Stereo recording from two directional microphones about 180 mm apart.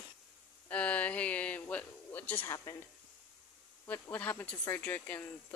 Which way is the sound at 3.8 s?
10° left (ahead or behind).